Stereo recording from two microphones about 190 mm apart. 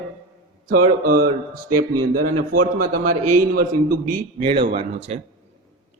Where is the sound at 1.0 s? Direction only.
50° right (ahead or behind).